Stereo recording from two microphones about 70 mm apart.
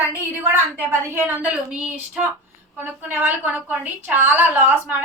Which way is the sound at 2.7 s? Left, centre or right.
Right.